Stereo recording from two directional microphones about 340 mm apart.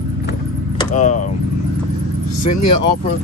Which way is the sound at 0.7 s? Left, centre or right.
Left.